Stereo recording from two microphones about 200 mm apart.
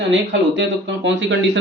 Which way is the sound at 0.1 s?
65° right (ahead or behind).